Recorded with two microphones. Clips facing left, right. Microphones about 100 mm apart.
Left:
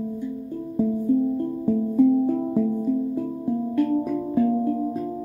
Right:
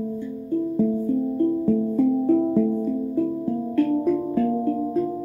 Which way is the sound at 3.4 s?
15° left (ahead or behind).